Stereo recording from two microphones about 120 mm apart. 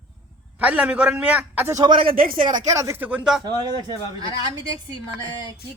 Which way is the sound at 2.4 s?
90° right.